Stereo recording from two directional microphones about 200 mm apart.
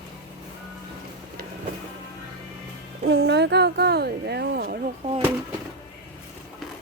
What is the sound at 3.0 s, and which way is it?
Speech, 60° right (ahead or behind).